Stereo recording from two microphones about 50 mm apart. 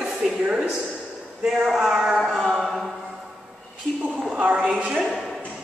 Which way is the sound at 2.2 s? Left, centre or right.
Centre.